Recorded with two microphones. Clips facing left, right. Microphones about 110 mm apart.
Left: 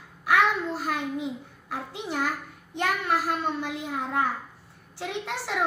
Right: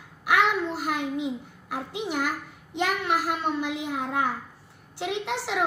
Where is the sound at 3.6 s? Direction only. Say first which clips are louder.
Right 3 dB; 75° right (ahead or behind).